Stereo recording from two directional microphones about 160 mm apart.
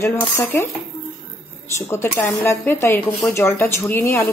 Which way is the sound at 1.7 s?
15° left (ahead or behind).